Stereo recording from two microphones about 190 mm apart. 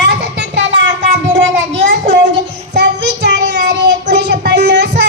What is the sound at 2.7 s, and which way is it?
Child singing, 60° right (ahead or behind).